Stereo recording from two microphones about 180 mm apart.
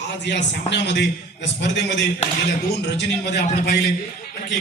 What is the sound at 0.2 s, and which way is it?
A man's voice, 75° left (ahead or behind).